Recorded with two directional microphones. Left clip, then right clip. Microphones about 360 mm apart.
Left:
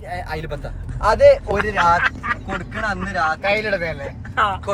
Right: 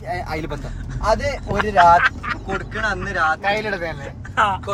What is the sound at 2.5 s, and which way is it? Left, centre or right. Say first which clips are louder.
Speech: right 1 dB; centre.